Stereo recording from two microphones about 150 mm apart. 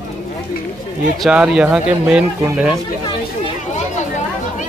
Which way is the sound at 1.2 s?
5° right (ahead or behind).